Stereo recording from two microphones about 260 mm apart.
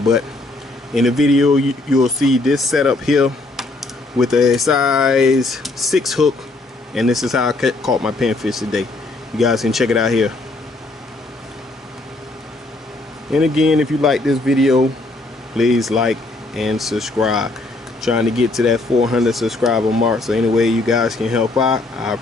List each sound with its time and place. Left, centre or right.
0.9 s speech: centre
13.3 s speech: centre